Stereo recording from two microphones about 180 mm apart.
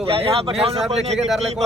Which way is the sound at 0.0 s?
30° right (ahead or behind).